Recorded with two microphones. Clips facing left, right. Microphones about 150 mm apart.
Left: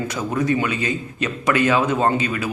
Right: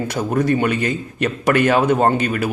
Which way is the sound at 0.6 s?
55° right (ahead or behind).